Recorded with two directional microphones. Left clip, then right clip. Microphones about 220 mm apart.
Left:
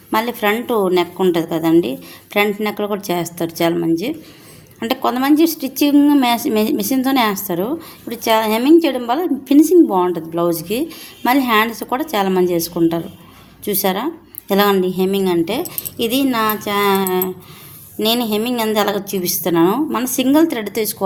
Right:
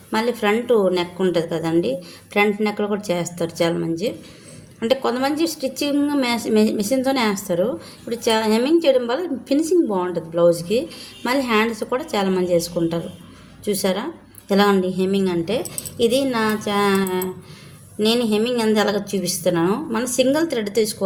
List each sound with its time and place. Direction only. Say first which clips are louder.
0.1 s a woman's voice: left 3 dB; 35° left (ahead or behind)